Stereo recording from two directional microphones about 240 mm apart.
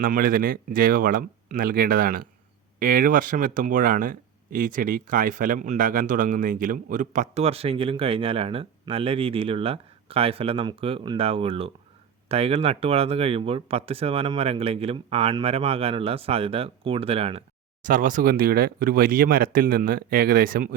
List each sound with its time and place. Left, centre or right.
0.0 s speech: right